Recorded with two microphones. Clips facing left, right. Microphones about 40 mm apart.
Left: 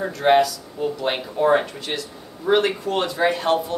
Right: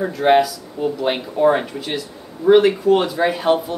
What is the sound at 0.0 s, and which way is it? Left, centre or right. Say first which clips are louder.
Speech: right 2 dB; centre.